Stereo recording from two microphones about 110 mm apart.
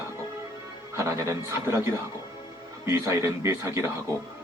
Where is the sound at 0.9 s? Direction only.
25° right (ahead or behind).